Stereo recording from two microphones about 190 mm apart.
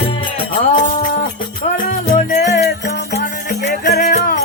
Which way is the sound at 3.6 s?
55° left (ahead or behind).